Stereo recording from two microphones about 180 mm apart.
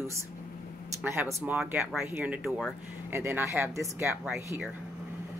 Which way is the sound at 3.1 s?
15° right (ahead or behind).